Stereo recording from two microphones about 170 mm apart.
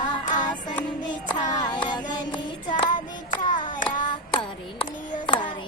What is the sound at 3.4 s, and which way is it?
Child singing, 50° left (ahead or behind).